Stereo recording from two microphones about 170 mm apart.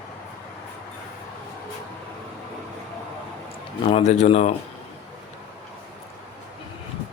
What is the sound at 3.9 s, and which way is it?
Speech, 40° left (ahead or behind).